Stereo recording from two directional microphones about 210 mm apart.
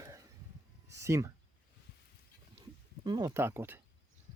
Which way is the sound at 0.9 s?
15° right (ahead or behind).